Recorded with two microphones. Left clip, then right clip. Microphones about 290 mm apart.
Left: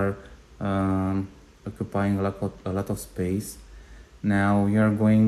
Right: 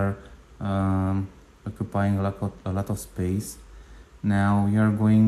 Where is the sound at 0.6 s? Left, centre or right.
Centre.